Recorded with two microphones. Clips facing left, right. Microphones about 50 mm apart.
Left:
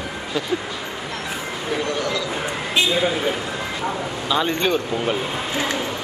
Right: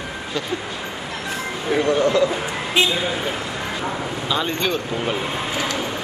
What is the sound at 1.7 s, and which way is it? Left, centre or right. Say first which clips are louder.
Speech: right 8 dB; right.